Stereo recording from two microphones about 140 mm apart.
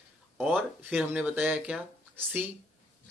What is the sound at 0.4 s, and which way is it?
Speech, 10° right (ahead or behind).